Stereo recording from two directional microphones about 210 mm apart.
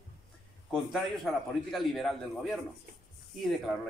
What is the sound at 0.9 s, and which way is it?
A man's voice, centre (ahead or behind).